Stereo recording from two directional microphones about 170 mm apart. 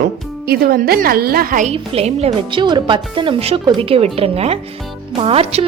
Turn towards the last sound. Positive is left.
turn(degrees=-35)  # may be behind; listen again after turning